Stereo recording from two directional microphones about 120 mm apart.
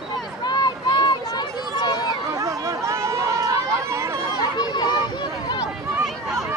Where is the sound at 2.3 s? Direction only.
30° right (ahead or behind).